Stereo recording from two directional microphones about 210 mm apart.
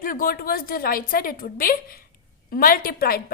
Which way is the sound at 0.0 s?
40° left (ahead or behind).